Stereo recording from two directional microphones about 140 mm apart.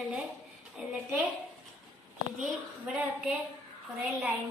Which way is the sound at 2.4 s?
10° right (ahead or behind).